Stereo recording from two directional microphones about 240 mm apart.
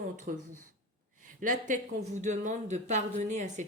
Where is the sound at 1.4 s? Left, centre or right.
Right.